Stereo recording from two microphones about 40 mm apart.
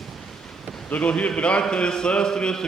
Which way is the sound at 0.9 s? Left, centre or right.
Left.